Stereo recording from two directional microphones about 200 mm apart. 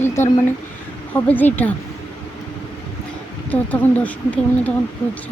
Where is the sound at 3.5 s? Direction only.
10° left (ahead or behind).